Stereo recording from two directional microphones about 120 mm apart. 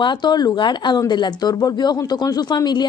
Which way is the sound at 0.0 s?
40° left (ahead or behind).